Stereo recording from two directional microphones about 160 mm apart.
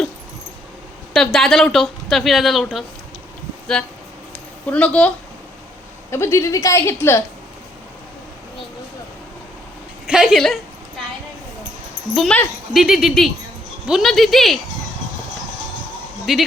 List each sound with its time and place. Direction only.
1.1 s speech: centre (ahead or behind)
4.6 s speech: 10° left (ahead or behind)
10.1 s a sound: 5° right (ahead or behind)
12.1 s speech: centre (ahead or behind)
16.3 s speech: centre (ahead or behind)